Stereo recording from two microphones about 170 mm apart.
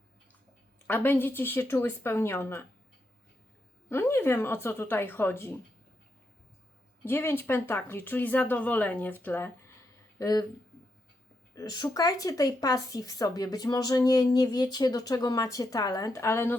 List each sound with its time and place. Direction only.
0.9 s speech: 10° left (ahead or behind)
3.8 s speech: 15° left (ahead or behind)
7.0 s speech: 15° left (ahead or behind)
11.5 s speech: 25° left (ahead or behind)